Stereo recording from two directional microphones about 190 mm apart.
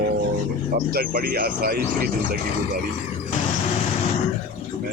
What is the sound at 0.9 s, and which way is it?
Speech, 50° right (ahead or behind).